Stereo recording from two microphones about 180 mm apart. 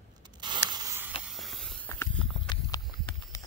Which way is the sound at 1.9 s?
10° left (ahead or behind).